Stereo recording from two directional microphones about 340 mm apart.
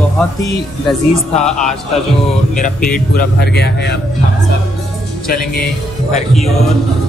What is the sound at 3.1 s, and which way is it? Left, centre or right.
Speech, left.